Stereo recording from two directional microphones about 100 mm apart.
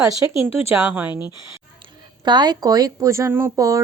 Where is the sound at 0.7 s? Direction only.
20° right (ahead or behind).